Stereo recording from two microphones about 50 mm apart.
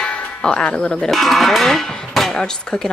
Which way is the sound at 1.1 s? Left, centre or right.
Centre.